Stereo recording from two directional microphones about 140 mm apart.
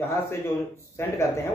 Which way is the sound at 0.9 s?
20° left (ahead or behind).